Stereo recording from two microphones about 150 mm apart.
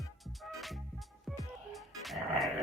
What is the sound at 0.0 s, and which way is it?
Music, centre (ahead or behind).